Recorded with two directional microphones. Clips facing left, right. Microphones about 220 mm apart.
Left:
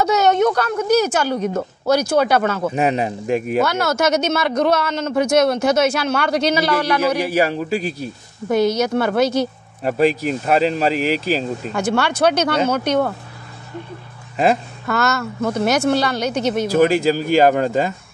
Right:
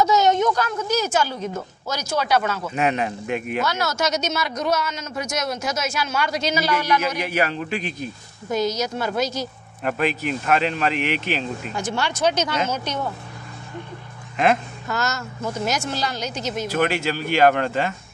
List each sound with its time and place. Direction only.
0.0 s speech: 65° left (ahead or behind)
2.7 s speech: 35° left (ahead or behind)
3.6 s speech: 55° left (ahead or behind)
6.7 s speech: 30° left (ahead or behind)
8.5 s speech: 60° left (ahead or behind)
9.8 s speech: 35° left (ahead or behind)
11.7 s speech: 60° left (ahead or behind)
14.9 s speech: 60° left (ahead or behind)
16.7 s speech: 35° left (ahead or behind)